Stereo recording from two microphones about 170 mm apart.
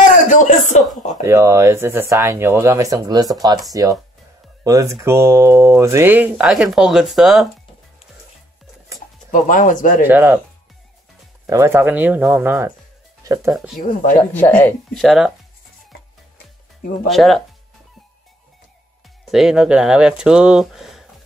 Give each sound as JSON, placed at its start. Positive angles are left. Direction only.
{"t": 0.1, "sound": "a sound", "side_deg": 45}
{"t": 1.2, "sound": "speech", "side_deg": -15}
{"t": 9.3, "sound": "speech", "side_deg": 50}
{"t": 10.0, "sound": "speech", "side_deg": -10}
{"t": 11.4, "sound": "speech", "side_deg": -15}
{"t": 13.5, "sound": "speech", "side_deg": 0}
{"t": 13.7, "sound": "speech", "side_deg": 50}
{"t": 14.3, "sound": "speech", "side_deg": 10}
{"t": 15.0, "sound": "speech", "side_deg": -5}
{"t": 17.1, "sound": "speech", "side_deg": 0}
{"t": 19.3, "sound": "speech", "side_deg": -5}